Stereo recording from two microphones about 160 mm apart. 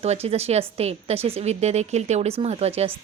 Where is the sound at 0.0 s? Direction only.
40° right (ahead or behind).